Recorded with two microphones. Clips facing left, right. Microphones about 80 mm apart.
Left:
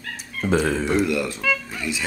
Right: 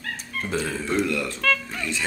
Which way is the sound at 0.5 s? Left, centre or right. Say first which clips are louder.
Left 7 dB; left.